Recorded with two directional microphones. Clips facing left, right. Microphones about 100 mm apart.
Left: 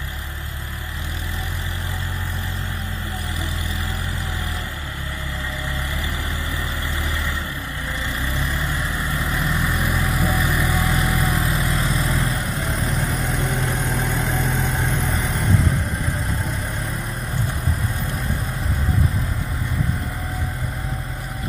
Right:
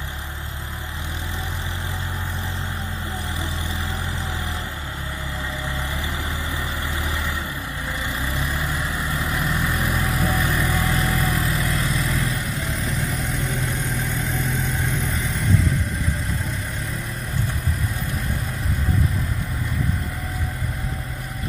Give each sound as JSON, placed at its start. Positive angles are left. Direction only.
{"t": 8.4, "sound": "vehicle", "side_deg": -5}
{"t": 11.4, "sound": "vehicle", "side_deg": 25}
{"t": 13.6, "sound": "vehicle", "side_deg": 60}